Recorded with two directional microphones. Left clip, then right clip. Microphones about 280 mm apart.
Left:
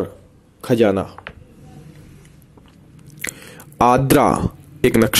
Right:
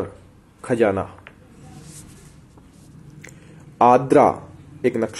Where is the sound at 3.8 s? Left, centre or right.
Left.